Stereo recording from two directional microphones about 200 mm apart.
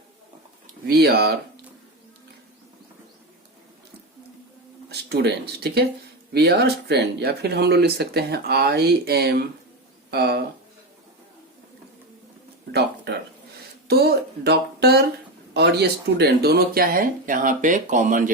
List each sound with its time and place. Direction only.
0.9 s speech: 50° right (ahead or behind)
4.9 s speech: 55° right (ahead or behind)
13.8 s speech: 50° right (ahead or behind)